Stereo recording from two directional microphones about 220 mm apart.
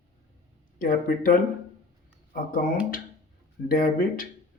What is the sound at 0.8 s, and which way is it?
Speech, 40° left (ahead or behind).